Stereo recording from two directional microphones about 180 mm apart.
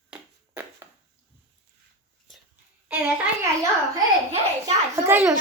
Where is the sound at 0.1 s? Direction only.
10° right (ahead or behind).